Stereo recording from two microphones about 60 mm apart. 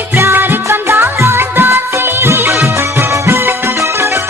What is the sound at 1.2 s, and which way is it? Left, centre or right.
Music of bollywood, right.